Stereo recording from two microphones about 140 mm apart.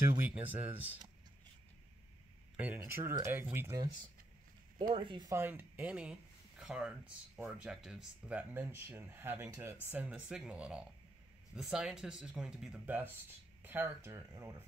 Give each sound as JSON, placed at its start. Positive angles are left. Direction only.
{"t": 0.2, "sound": "speech", "side_deg": -10}
{"t": 2.5, "sound": "speech", "side_deg": -15}
{"t": 4.7, "sound": "speech", "side_deg": -35}
{"t": 5.3, "sound": "speech", "side_deg": -15}